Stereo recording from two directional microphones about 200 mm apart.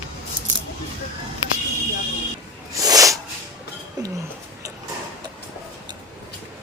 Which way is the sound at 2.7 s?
15° right (ahead or behind).